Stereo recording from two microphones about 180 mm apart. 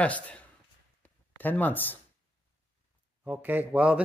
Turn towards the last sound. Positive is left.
turn(degrees=-5)  # may be behind; listen again after turning